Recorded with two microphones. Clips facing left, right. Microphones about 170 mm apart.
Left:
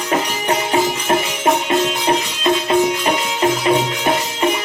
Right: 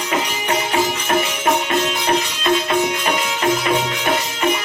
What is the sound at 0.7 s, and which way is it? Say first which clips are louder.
Music: left 2 dB; 20° left (ahead or behind).